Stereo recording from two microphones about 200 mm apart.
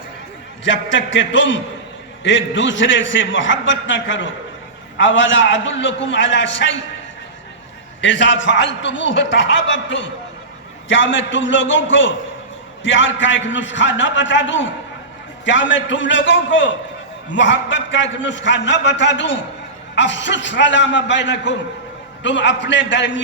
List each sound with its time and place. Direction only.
0.6 s a man's voice: 65° left (ahead or behind)
8.0 s a man's voice: 65° left (ahead or behind)